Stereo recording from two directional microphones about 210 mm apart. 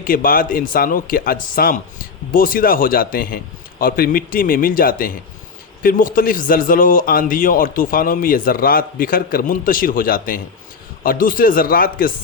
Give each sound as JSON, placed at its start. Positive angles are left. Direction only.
{"t": 0.0, "sound": "a man's voice", "side_deg": 40}